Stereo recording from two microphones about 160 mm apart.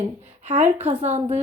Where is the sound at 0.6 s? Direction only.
10° right (ahead or behind).